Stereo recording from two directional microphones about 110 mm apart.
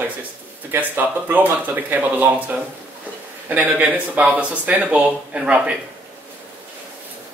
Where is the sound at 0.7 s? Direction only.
15° right (ahead or behind).